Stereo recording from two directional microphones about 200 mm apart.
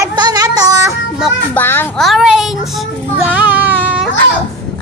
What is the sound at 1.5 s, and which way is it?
Child singing, 10° left (ahead or behind).